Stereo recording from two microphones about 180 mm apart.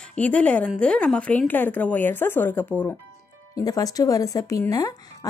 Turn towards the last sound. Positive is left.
turn(degrees=20)  # may be behind; listen again after turning